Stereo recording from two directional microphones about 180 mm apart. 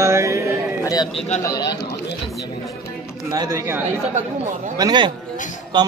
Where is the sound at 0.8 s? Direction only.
20° left (ahead or behind).